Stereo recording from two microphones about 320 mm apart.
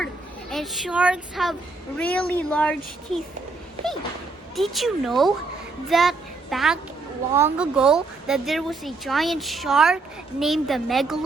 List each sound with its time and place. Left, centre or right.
0.5 s speech: centre
4.5 s a child's voice: centre